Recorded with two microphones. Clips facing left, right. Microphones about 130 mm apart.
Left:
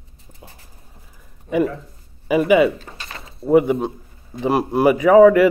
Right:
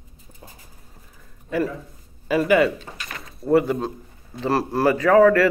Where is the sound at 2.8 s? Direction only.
30° left (ahead or behind).